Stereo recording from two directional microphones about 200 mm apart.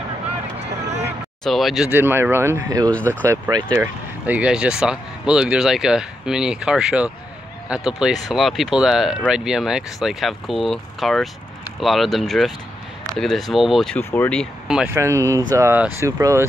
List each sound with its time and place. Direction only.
0.8 s vehicle: 60° right (ahead or behind)
1.4 s speech: centre (ahead or behind); by 16.4 s 15° right (ahead or behind)